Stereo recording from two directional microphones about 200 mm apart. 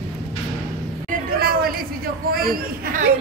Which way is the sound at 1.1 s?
50° right (ahead or behind).